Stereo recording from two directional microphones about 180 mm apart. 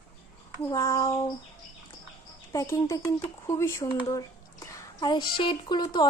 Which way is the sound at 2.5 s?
15° left (ahead or behind).